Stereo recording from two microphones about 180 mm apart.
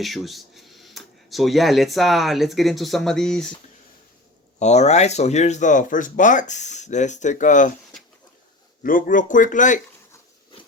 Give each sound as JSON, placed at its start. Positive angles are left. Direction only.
{"t": 0.0, "sound": "speech", "side_deg": 0}
{"t": 4.6, "sound": "speech", "side_deg": 40}
{"t": 8.8, "sound": "speech", "side_deg": 50}